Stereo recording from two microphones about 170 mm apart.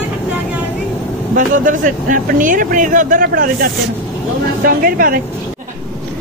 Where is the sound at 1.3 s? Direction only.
50° right (ahead or behind).